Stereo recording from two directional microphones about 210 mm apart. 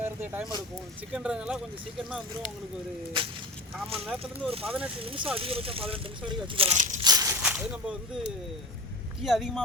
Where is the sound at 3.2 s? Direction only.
25° right (ahead or behind).